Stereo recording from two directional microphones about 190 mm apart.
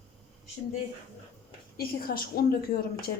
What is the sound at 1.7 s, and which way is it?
Speech, 50° left (ahead or behind).